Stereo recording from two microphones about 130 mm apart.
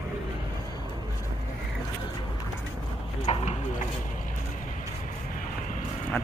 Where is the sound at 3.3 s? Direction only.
60° left (ahead or behind).